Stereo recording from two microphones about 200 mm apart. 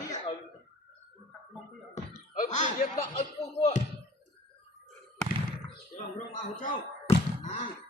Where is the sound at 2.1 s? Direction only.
40° left (ahead or behind).